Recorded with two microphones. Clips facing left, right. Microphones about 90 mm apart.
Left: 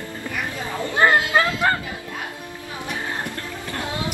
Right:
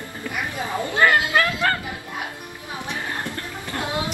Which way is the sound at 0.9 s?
25° left (ahead or behind).